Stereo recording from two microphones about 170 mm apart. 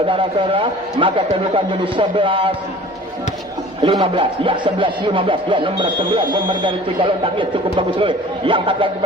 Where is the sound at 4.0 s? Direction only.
30° right (ahead or behind).